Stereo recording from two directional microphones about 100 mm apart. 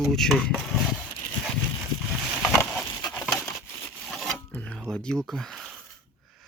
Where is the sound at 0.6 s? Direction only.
Centre (ahead or behind).